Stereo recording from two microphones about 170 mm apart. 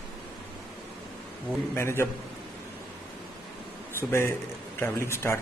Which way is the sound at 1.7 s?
15° left (ahead or behind).